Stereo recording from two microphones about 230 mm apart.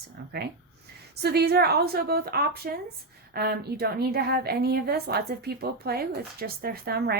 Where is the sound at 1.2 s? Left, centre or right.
Right.